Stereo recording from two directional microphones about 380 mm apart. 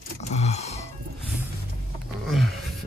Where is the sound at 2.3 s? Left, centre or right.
Centre.